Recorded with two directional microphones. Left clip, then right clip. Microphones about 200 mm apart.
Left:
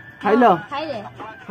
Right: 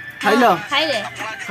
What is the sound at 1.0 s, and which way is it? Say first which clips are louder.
Music: right 8 dB; 55° right (ahead or behind).